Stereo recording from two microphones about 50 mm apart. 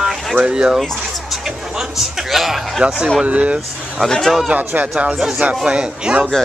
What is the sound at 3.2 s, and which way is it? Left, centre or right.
Speech, right.